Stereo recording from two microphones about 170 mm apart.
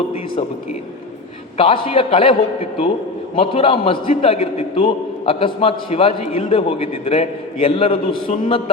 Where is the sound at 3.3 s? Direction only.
30° left (ahead or behind).